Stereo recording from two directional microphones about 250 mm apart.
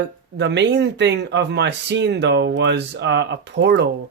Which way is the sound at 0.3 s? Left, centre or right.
Right.